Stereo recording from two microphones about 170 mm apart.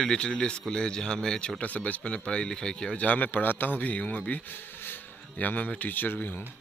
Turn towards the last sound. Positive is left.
turn(degrees=10)  # may be behind; listen again after turning